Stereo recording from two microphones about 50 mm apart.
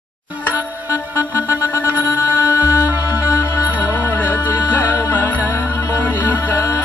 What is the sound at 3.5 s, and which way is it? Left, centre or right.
Music, left.